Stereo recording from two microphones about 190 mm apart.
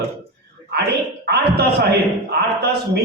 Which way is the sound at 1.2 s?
60° right (ahead or behind).